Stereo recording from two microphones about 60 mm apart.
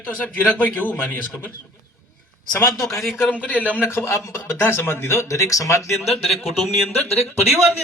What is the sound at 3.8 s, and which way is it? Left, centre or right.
Speech, left.